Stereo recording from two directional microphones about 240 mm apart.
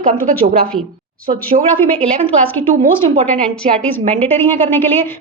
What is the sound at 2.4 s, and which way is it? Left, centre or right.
A woman's voice, centre.